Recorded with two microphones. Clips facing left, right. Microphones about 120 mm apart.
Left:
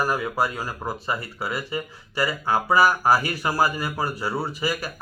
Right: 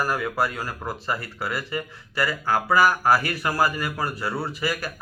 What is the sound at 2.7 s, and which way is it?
Speech, 25° left (ahead or behind).